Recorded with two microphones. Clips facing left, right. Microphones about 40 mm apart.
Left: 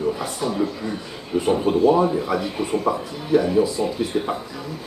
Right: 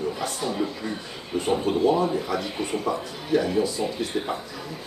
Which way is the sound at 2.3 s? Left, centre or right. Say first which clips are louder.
Left 4 dB; centre.